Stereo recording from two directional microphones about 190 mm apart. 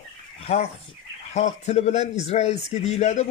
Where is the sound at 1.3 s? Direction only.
35° left (ahead or behind).